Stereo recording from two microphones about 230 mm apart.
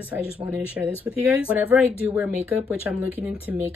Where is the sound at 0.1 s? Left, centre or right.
Centre.